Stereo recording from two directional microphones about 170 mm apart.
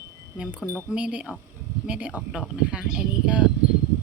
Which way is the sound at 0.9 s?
5° right (ahead or behind).